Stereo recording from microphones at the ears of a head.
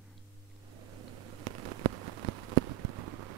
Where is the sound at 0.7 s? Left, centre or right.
Right.